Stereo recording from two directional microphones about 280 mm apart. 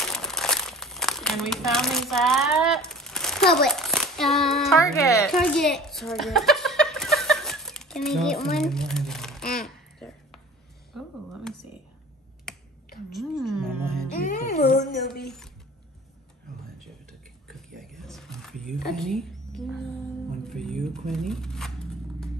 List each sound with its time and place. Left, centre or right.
0.0 s crumpling: centre
3.5 s a child's voice: centre
9.6 s a sound: centre
12.5 s finger snapping: centre
13.1 s music: centre
14.5 s a sound: left
15.2 s a sound: centre
17.7 s wild animals: centre
20.4 s music: centre
21.1 s shuffling cards: centre